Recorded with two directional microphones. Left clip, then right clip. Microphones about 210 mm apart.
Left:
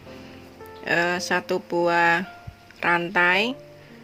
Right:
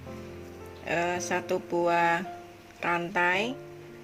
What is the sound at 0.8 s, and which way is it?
Speech, 25° left (ahead or behind).